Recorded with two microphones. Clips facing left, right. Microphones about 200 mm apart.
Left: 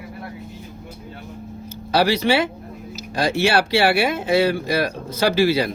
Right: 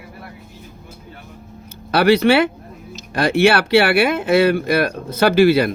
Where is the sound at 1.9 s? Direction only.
60° right (ahead or behind).